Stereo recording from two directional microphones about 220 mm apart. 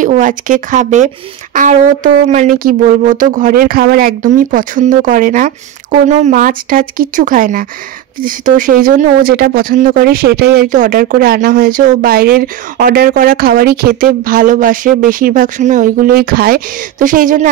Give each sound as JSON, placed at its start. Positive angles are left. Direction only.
{"t": 0.0, "sound": "speech", "side_deg": -35}